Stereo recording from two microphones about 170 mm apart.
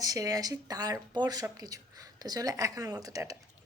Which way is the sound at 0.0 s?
20° right (ahead or behind).